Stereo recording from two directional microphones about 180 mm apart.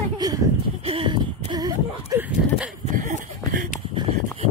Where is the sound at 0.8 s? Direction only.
30° right (ahead or behind).